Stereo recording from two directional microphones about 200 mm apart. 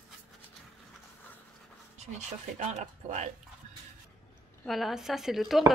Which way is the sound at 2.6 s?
35° right (ahead or behind).